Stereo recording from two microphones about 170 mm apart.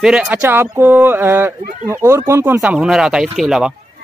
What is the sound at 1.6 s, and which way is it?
Speech, 55° right (ahead or behind).